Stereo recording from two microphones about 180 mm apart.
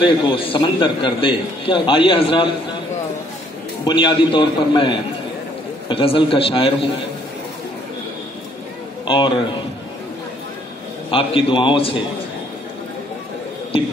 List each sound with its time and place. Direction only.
0.0 s a man's voice: 30° left (ahead or behind)
3.8 s a man's voice: 25° left (ahead or behind)
9.0 s a man's voice: 25° left (ahead or behind)
11.1 s a man's voice: 30° left (ahead or behind)